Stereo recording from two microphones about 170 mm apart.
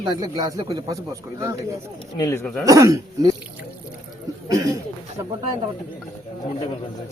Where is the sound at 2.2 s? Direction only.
20° left (ahead or behind).